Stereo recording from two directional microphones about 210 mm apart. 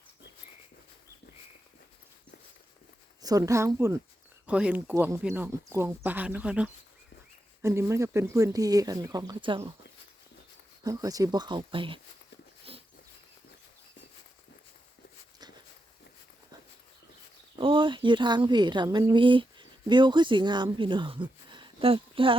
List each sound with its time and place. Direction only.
3.2 s speech: 15° right (ahead or behind)
10.8 s speech: 15° right (ahead or behind)
17.6 s speech: 25° right (ahead or behind)